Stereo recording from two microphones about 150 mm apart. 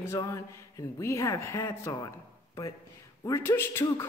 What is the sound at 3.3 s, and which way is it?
Speech, 15° left (ahead or behind).